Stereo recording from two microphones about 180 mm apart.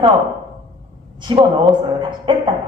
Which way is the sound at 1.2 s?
25° right (ahead or behind).